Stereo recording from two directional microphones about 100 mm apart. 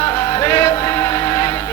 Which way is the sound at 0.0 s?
30° left (ahead or behind).